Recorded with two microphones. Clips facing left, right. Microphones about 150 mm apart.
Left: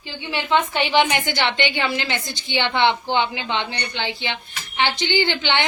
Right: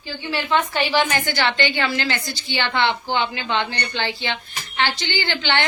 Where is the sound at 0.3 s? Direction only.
20° left (ahead or behind).